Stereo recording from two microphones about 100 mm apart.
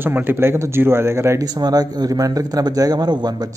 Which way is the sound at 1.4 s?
40° right (ahead or behind).